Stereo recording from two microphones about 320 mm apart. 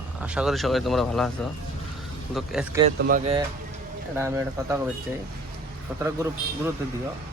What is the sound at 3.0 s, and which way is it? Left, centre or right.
Speech, right.